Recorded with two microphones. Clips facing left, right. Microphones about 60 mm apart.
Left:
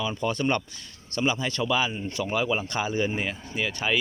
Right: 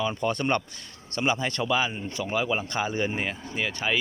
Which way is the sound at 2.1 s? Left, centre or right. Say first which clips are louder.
Left 1 dB; right.